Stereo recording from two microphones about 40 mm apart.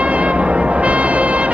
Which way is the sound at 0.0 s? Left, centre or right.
Right.